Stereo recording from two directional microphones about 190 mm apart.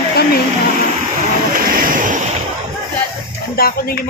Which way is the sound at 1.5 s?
45° right (ahead or behind).